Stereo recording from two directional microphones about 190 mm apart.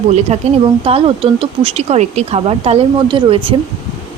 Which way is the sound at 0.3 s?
35° right (ahead or behind).